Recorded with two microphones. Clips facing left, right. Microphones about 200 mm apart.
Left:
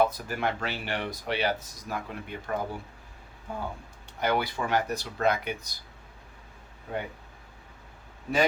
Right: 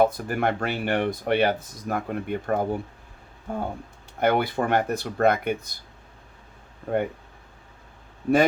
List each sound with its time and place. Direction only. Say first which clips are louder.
0.0 s speech: right 5 dB; 55° right (ahead or behind)
6.9 s speech: right 9 dB; 55° right (ahead or behind)